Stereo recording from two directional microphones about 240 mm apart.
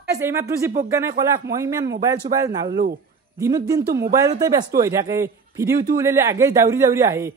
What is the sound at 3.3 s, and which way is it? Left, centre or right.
A man's voice, centre.